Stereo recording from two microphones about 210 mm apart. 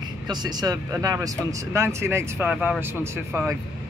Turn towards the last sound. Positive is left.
turn(degrees=-10)  # may be behind; listen again after turning